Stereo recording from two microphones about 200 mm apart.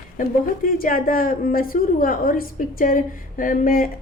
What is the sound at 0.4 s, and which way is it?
A woman's voice, 45° left (ahead or behind).